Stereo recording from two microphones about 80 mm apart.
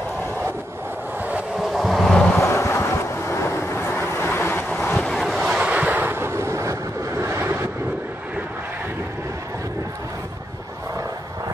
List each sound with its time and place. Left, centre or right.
1.6 s vehicle: centre
2.4 s vehicle: left
4.6 s vehicle: centre
5.7 s vehicle: centre